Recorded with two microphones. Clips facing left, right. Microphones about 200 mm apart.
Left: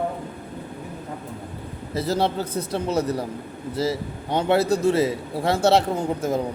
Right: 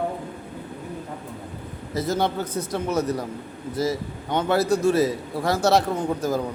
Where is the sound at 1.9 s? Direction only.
30° left (ahead or behind).